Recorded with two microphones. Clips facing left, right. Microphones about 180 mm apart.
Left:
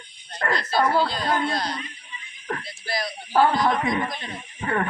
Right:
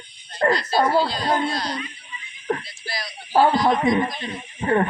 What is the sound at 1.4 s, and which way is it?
Speech, 50° left (ahead or behind).